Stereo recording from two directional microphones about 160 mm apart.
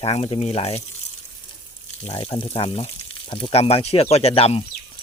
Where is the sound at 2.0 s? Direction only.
40° left (ahead or behind).